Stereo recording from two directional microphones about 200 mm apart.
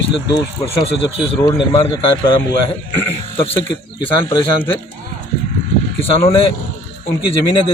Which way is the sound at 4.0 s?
25° left (ahead or behind).